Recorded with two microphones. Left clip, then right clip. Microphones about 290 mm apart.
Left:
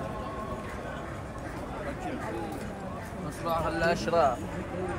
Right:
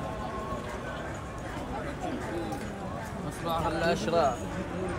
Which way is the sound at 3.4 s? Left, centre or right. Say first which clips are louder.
Left 1 dB; centre.